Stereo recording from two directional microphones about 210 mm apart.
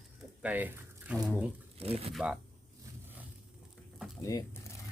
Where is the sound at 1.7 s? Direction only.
30° right (ahead or behind).